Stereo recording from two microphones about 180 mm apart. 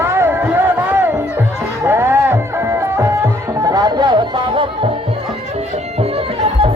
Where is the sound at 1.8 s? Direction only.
15° right (ahead or behind).